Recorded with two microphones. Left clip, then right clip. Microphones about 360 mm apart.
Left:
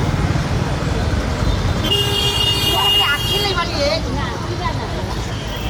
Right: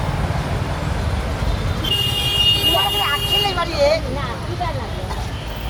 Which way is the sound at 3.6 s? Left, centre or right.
Centre.